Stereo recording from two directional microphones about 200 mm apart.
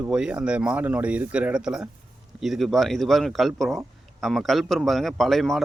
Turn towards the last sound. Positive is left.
turn(degrees=0)  # may be behind; listen again after turning